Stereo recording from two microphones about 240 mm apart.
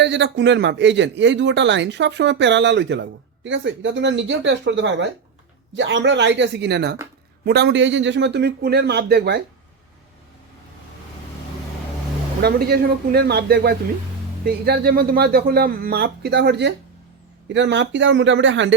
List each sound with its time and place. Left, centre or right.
0.0 s speech: right
12.4 s speech: right